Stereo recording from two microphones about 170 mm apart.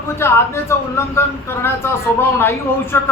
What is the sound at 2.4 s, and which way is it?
Speech, 15° left (ahead or behind).